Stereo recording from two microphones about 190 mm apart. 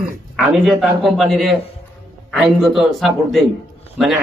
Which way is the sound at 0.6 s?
Centre (ahead or behind).